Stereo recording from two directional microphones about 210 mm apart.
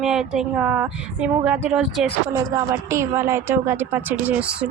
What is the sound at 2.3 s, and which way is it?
A woman's voice, 15° right (ahead or behind).